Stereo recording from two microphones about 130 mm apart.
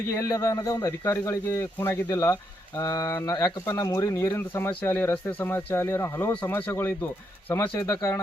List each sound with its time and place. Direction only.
0.2 s speech: 25° left (ahead or behind)